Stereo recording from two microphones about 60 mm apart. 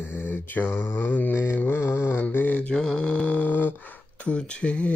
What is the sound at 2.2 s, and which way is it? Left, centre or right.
Mantra, left.